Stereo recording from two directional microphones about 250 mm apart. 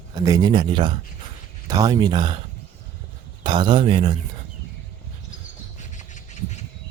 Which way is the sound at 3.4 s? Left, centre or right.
Centre.